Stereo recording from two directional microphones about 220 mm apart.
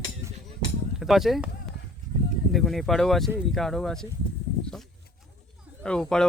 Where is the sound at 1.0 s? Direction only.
Centre (ahead or behind).